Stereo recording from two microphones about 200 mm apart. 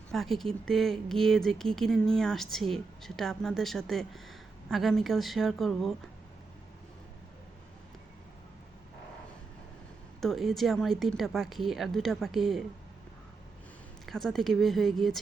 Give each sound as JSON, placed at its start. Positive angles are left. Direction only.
{"t": 0.1, "sound": "speech", "side_deg": 0}
{"t": 10.2, "sound": "speech", "side_deg": 0}
{"t": 14.1, "sound": "speech", "side_deg": 0}